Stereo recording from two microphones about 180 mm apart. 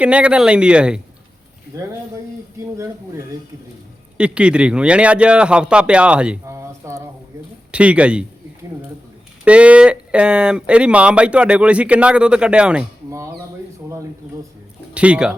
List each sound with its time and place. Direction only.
0.0 s speech: 5° right (ahead or behind)
1.7 s speech: 15° right (ahead or behind)
9.4 s speech: 5° right (ahead or behind)
13.1 s speech: 15° right (ahead or behind)
14.9 s speech: 5° right (ahead or behind)